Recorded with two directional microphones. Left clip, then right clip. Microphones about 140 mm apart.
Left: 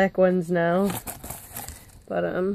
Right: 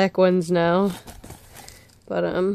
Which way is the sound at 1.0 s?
45° left (ahead or behind).